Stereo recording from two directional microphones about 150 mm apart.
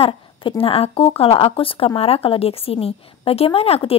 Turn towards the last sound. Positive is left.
turn(degrees=40)  # may be behind; listen again after turning